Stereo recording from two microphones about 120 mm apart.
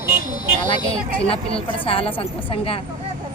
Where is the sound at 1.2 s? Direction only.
55° left (ahead or behind).